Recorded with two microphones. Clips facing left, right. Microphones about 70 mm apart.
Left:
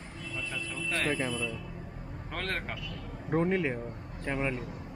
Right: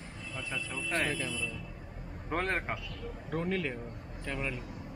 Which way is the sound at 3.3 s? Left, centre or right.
Left.